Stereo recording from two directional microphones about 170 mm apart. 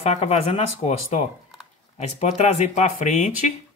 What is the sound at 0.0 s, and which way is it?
Speech, 40° left (ahead or behind).